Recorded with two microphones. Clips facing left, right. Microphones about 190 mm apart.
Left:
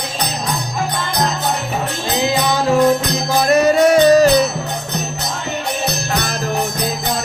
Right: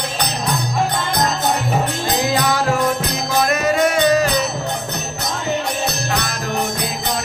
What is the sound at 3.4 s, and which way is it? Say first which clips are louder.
Music: left 7 dB; 35° left (ahead or behind).